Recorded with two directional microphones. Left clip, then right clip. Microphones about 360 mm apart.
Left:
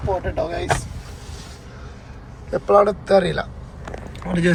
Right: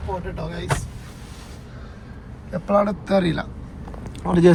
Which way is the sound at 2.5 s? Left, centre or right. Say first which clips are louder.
Left 5 dB; centre.